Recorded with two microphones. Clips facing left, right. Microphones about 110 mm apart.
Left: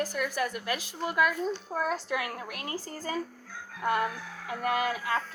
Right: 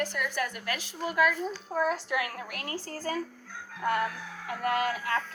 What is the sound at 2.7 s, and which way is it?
Speech, 15° left (ahead or behind).